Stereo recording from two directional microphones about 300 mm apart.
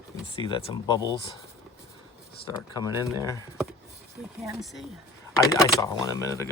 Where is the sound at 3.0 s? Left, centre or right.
Centre.